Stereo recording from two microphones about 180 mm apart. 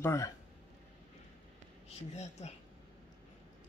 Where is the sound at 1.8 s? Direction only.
35° left (ahead or behind).